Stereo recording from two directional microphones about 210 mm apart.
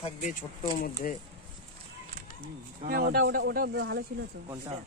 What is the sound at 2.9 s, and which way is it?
Speech, 45° right (ahead or behind).